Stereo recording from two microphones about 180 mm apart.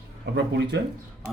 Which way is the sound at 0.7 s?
70° right (ahead or behind).